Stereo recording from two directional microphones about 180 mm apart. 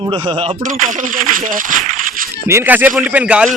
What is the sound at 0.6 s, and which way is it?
Speech, 45° right (ahead or behind).